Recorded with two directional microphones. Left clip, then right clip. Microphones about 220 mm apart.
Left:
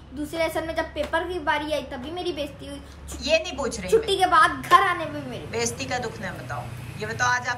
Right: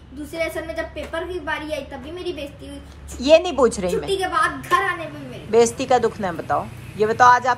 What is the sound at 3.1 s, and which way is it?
A woman's voice, centre (ahead or behind).